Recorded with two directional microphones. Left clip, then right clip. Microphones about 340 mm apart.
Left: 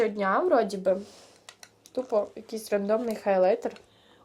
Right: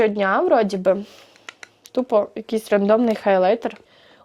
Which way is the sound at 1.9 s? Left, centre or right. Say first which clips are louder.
Right 8 dB; right.